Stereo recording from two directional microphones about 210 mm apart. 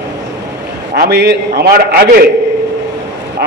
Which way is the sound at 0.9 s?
55° right (ahead or behind).